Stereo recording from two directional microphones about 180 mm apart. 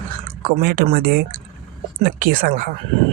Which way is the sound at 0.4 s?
55° right (ahead or behind).